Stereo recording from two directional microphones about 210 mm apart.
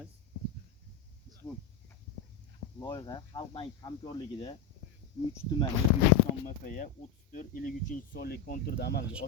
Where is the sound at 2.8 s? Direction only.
20° left (ahead or behind).